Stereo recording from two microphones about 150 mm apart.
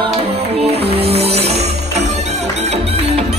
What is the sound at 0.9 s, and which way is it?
Music, 40° right (ahead or behind).